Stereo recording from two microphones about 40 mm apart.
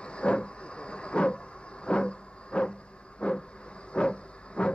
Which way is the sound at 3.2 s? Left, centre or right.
Left.